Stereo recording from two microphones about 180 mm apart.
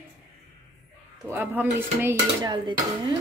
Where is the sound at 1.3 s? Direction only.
10° right (ahead or behind).